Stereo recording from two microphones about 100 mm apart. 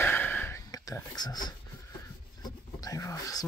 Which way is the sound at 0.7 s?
40° left (ahead or behind).